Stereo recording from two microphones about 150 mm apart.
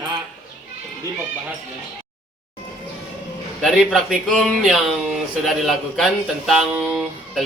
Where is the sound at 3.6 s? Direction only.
Centre (ahead or behind).